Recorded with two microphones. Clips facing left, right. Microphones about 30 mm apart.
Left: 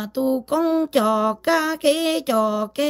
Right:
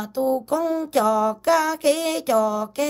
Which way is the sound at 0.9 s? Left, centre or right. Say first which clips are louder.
Right 2 dB; left.